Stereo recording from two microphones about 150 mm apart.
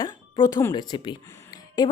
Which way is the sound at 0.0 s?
25° left (ahead or behind).